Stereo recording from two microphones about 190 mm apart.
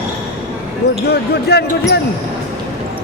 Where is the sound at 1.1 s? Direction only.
60° left (ahead or behind).